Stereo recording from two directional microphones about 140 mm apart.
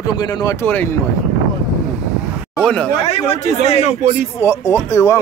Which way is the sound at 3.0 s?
45° left (ahead or behind).